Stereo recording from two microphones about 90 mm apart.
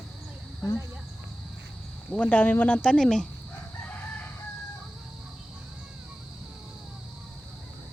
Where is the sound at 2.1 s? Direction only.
15° left (ahead or behind).